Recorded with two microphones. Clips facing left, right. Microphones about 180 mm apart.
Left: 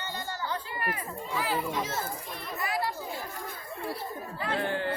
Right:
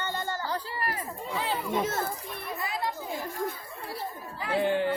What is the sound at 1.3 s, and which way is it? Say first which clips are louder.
Speech: left 1 dB; 25° right (ahead or behind).